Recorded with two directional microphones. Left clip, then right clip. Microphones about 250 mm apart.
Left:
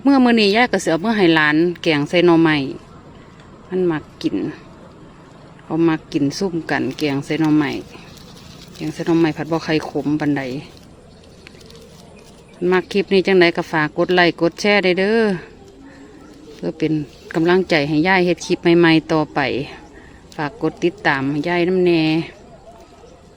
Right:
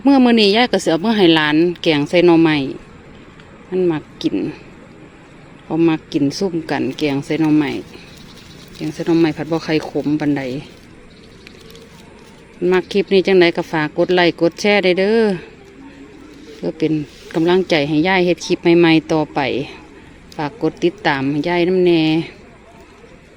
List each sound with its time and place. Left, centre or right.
0.0 s speech: centre
5.6 s speech: centre
12.6 s speech: centre
16.6 s speech: centre